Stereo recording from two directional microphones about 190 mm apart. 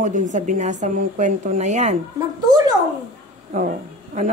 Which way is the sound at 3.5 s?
40° right (ahead or behind).